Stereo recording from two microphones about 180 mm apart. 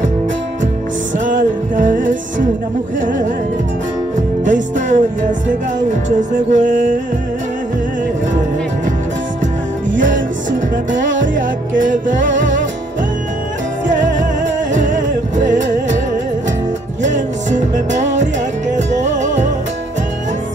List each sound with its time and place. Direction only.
1.1 s music: 45° right (ahead or behind)
4.5 s music: 45° right (ahead or behind)
6.1 s music: 45° right (ahead or behind)
9.9 s music: 45° right (ahead or behind)
11.8 s music: 45° right (ahead or behind)
14.4 s music: 45° right (ahead or behind)
17.0 s music: 40° right (ahead or behind)